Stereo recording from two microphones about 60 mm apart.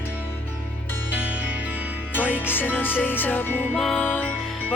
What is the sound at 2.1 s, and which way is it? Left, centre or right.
Music, left.